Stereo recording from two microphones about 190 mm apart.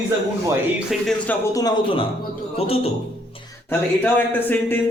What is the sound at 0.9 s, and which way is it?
Speech, centre (ahead or behind).